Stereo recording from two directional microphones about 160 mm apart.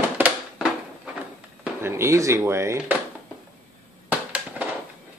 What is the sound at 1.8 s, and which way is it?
Speech, 15° right (ahead or behind).